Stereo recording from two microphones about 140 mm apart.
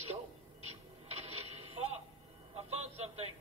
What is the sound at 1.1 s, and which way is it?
Radio, 50° right (ahead or behind).